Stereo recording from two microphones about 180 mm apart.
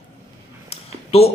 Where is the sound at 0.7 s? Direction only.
35° left (ahead or behind).